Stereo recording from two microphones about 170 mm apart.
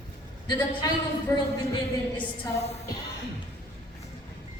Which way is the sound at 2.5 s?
40° left (ahead or behind).